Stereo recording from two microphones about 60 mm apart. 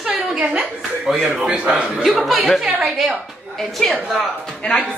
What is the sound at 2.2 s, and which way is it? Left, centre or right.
A man's voice, centre.